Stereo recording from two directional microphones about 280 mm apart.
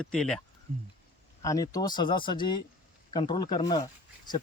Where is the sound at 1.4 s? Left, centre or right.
Centre.